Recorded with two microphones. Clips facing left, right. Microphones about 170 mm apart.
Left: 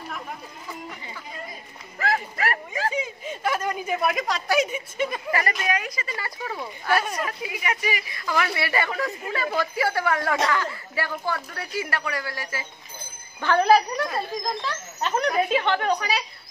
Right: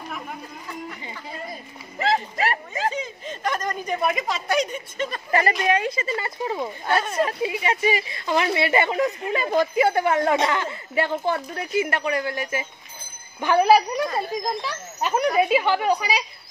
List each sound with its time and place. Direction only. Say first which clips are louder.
2.0 s a sound: right 3 dB; 25° right (ahead or behind)
2.9 s speech: left 1 dB; 10° left (ahead or behind)
5.3 s a woman's voice: right 5 dB; 25° right (ahead or behind); by 16.3 s 10° right (ahead or behind)